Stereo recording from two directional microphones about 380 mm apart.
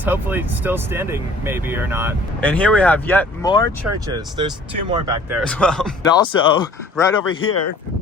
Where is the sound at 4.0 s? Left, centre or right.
Centre.